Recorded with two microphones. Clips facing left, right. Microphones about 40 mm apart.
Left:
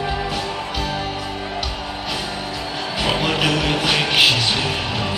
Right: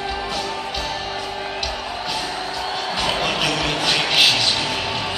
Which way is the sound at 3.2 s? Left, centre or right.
Centre.